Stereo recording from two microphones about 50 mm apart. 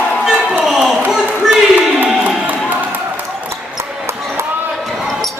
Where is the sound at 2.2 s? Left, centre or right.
Right.